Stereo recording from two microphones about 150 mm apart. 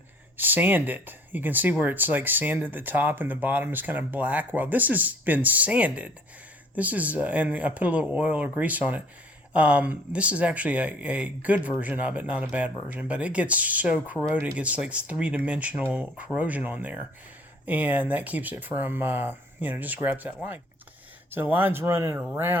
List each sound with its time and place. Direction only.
0.3 s speech: 10° right (ahead or behind)